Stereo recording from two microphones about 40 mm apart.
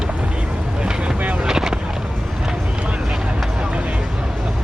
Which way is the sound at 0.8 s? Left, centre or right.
Right.